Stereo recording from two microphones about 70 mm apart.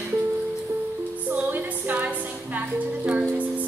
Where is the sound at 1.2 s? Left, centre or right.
Right.